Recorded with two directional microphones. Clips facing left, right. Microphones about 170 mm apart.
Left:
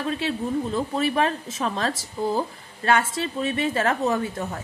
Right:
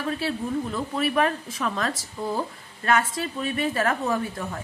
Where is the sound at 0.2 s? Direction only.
25° left (ahead or behind).